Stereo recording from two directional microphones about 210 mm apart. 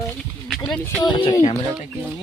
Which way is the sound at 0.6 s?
5° left (ahead or behind).